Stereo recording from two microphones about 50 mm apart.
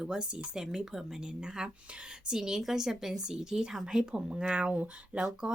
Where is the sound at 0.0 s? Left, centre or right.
Centre.